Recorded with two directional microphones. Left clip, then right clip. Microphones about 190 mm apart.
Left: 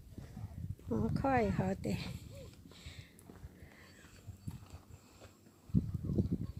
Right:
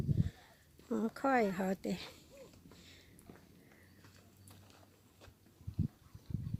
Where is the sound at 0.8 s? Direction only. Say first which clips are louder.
Even; 10° right (ahead or behind).